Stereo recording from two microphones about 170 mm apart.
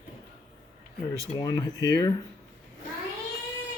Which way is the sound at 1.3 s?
25° left (ahead or behind).